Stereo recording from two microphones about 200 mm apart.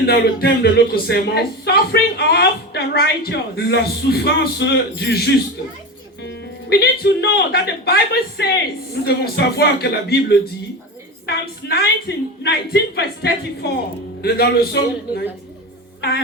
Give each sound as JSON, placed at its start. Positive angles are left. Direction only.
{"t": 0.0, "sound": "speech", "side_deg": 50}
{"t": 16.0, "sound": "music", "side_deg": 55}